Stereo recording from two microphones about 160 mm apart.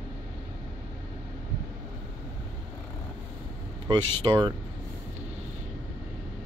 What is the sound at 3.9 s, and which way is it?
Speech, 30° right (ahead or behind).